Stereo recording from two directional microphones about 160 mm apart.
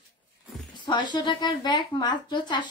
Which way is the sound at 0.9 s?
30° left (ahead or behind).